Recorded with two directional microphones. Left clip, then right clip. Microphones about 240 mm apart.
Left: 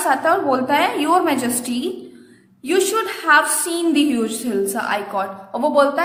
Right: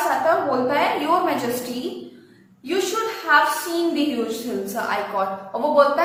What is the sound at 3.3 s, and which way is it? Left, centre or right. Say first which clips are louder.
Speech: left 3 dB; left.